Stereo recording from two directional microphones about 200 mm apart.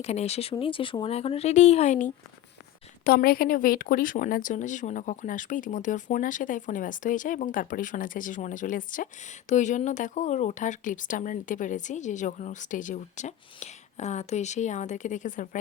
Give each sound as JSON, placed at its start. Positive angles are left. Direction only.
{"t": 0.0, "sound": "speech", "side_deg": 30}
{"t": 3.0, "sound": "speech", "side_deg": 50}